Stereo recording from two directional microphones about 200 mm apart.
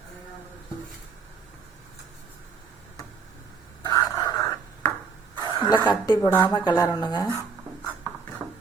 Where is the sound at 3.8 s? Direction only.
20° left (ahead or behind).